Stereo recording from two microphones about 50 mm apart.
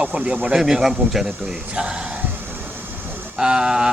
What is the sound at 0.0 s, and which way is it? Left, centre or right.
Speech, centre.